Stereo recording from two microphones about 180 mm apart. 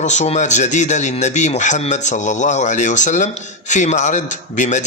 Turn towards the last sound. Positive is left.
turn(degrees=40)  # may be behind; listen again after turning